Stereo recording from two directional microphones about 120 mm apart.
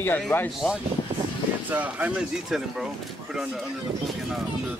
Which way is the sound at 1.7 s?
15° right (ahead or behind).